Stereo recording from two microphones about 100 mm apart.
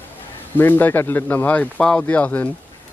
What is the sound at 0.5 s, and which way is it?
Speech, 20° left (ahead or behind).